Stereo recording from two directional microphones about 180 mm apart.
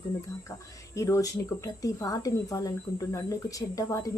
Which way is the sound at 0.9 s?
15° left (ahead or behind).